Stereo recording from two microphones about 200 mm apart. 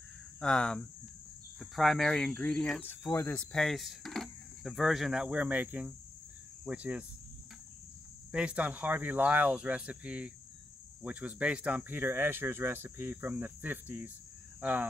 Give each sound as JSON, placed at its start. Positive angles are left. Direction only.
{"t": 0.4, "sound": "speech", "side_deg": 5}
{"t": 2.9, "sound": "cricket", "side_deg": 10}
{"t": 6.6, "sound": "speech", "side_deg": -5}
{"t": 8.3, "sound": "speech", "side_deg": -5}